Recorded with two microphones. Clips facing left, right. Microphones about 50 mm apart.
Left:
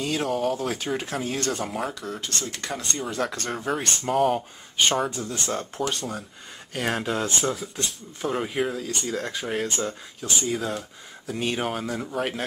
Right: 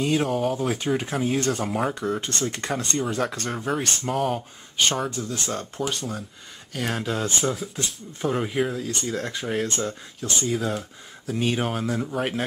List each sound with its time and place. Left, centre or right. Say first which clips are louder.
0.0 s speech: right 2 dB; centre
2.0 s speech: right 5 dB; right
2.7 s speech: right 3 dB; centre
5.1 s speech: right 1 dB; left
5.5 s speech: left 3 dB; centre
6.7 s speech: left 1 dB; centre